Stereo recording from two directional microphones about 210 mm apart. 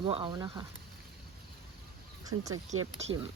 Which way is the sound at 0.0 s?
25° right (ahead or behind).